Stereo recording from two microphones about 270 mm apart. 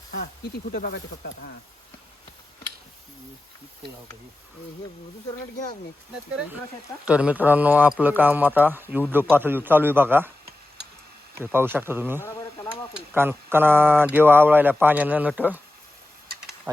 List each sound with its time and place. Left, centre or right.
0.7 s speech: left
7.0 s speech: centre
11.3 s speech: centre